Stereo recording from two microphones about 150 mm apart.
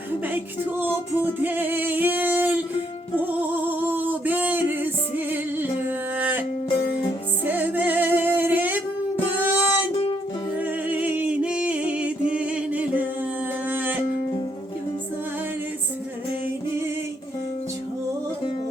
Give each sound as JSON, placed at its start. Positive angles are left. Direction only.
{"t": 0.3, "sound": "music", "side_deg": -15}
{"t": 7.4, "sound": "music", "side_deg": -10}
{"t": 9.9, "sound": "music", "side_deg": 40}
{"t": 10.6, "sound": "music", "side_deg": -10}